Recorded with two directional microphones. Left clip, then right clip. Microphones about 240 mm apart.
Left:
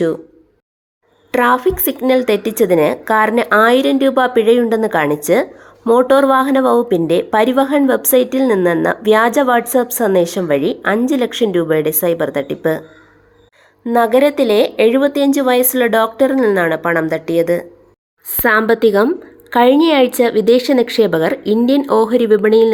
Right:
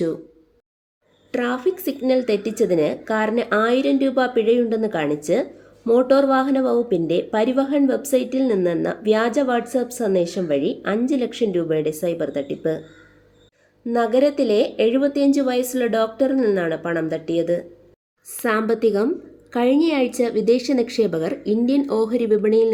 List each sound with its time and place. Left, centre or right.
1.3 s speech: centre
13.9 s speech: centre
18.7 s speech: centre